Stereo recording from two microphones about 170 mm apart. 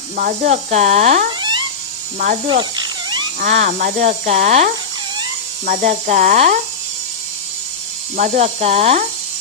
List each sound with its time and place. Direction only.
0.2 s speech: 50° right (ahead or behind)
1.4 s a sound: 25° right (ahead or behind)
2.1 s speech: 50° right (ahead or behind)
2.5 s cat: 25° right (ahead or behind)
3.4 s speech: 50° right (ahead or behind)
8.1 s speech: 45° right (ahead or behind)